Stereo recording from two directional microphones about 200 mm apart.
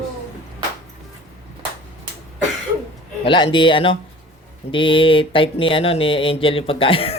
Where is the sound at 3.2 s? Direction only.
25° left (ahead or behind).